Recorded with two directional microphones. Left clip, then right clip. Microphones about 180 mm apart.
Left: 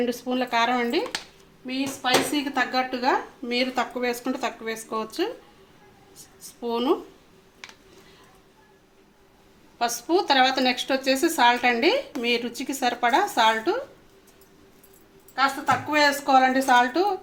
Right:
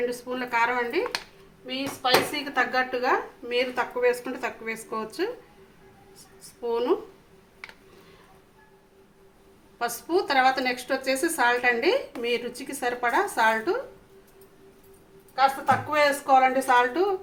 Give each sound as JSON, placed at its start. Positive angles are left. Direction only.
{"t": 0.3, "sound": "speech", "side_deg": 40}
{"t": 6.7, "sound": "speech", "side_deg": 30}
{"t": 9.7, "sound": "speech", "side_deg": 30}
{"t": 15.4, "sound": "speech", "side_deg": 30}